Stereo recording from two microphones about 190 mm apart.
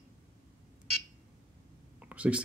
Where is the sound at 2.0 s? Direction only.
5° right (ahead or behind).